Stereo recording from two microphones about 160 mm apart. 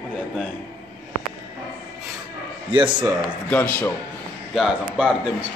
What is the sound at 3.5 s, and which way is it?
Speech, 10° left (ahead or behind).